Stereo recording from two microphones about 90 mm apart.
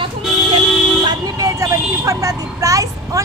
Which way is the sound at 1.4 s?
40° right (ahead or behind).